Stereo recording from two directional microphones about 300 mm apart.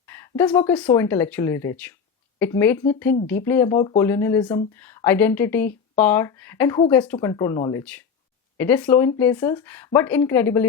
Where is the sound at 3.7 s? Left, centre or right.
Centre.